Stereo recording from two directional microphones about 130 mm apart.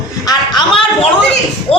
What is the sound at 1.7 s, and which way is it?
Speech, 50° left (ahead or behind).